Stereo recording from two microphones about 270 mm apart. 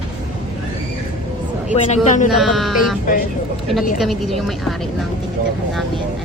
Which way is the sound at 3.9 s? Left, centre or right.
Centre.